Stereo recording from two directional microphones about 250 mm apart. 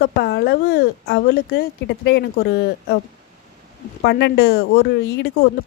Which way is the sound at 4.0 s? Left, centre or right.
Left.